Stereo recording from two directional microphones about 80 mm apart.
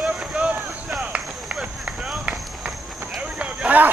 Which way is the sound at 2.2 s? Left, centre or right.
Centre.